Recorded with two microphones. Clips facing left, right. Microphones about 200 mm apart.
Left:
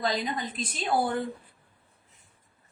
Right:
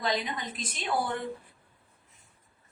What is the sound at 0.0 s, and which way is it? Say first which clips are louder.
A woman's voice: left 2 dB; 35° left (ahead or behind).